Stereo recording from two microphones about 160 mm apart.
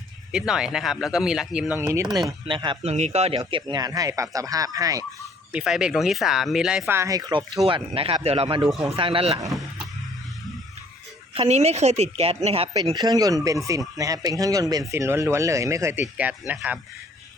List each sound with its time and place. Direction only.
0.3 s speech: 5° right (ahead or behind)
2.5 s a woman's voice: 30° right (ahead or behind)
2.9 s speech: 40° right (ahead or behind); by 5.0 s 20° right (ahead or behind)
5.5 s speech: 5° right (ahead or behind); by 7.4 s 25° right (ahead or behind)
7.6 s a woman's voice: 35° right (ahead or behind)
11.3 s a woman's voice: 40° right (ahead or behind)
12.7 s speech: 25° right (ahead or behind); by 16.8 s 5° right (ahead or behind)